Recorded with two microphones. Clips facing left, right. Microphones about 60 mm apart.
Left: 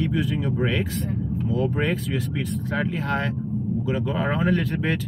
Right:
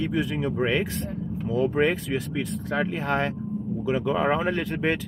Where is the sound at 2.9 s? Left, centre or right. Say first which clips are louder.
Even; right.